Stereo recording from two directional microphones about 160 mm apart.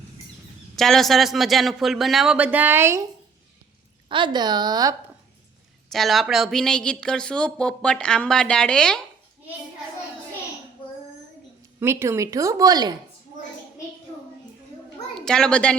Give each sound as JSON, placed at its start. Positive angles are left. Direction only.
{"t": 0.8, "sound": "speech", "side_deg": 0}
{"t": 4.1, "sound": "a woman's voice", "side_deg": -30}
{"t": 5.9, "sound": "speech", "side_deg": 0}
{"t": 11.8, "sound": "a woman's voice", "side_deg": -15}
{"t": 15.2, "sound": "speech", "side_deg": 5}